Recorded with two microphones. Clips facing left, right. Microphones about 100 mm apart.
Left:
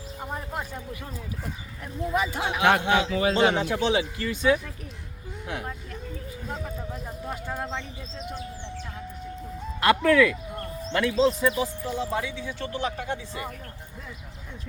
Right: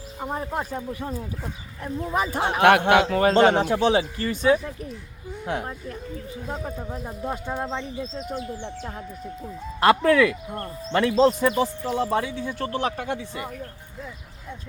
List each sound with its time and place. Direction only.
0.2 s speech: 30° right (ahead or behind); by 4.4 s 45° right (ahead or behind)
4.4 s speech: 30° right (ahead or behind)
7.3 s speech: 20° right (ahead or behind)
9.8 s speech: 30° right (ahead or behind)
11.2 s speech: 60° right (ahead or behind)
12.3 s speech: 45° right (ahead or behind)